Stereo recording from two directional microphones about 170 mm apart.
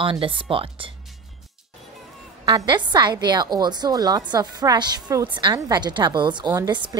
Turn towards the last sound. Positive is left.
turn(degrees=-25)  # may be behind; listen again after turning